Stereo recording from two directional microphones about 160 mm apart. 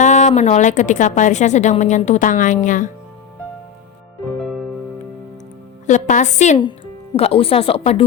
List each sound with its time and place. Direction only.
0.0 s a woman's voice: 45° left (ahead or behind)
5.8 s a woman's voice: 50° left (ahead or behind)
6.6 s speech: 30° left (ahead or behind)